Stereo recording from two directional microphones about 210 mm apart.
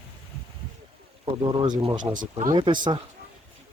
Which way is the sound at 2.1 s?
40° right (ahead or behind).